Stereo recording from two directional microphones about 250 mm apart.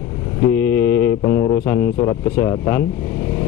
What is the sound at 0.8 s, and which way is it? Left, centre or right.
Mantra, left.